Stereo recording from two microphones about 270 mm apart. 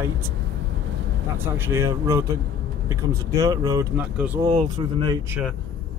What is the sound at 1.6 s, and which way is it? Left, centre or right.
Speech, centre.